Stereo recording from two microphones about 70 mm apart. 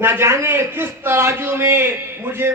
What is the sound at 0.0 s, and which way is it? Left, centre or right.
A man's voice, right.